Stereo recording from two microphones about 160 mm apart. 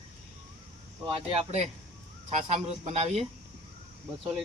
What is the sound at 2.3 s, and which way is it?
Speech, 40° right (ahead or behind).